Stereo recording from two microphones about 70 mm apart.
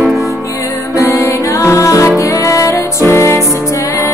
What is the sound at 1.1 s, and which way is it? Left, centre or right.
Music, left.